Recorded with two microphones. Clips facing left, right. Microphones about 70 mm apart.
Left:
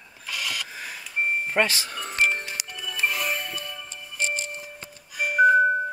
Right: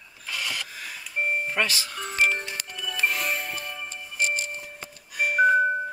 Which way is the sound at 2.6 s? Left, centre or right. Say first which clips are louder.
Even; centre.